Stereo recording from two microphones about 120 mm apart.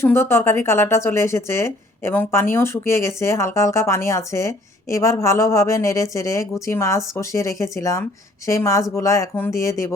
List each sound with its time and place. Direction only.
0.0 s a woman's voice: 20° left (ahead or behind)